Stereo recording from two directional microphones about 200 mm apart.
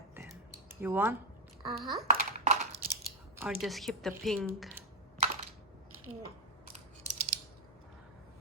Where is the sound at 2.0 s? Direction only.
35° right (ahead or behind).